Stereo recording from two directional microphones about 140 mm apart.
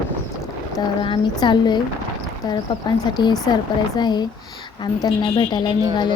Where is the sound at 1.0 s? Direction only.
35° left (ahead or behind).